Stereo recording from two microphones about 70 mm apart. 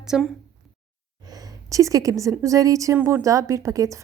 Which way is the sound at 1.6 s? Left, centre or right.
Right.